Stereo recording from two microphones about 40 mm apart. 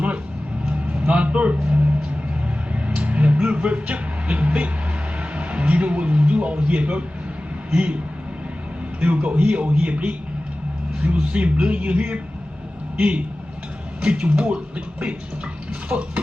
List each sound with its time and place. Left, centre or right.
0.7 s music: right
2.8 s a sound: right
3.4 s music: right
5.3 s a sound: right
7.7 s a man's voice: right
9.0 s a man's voice: right
15.9 s a man's voice: right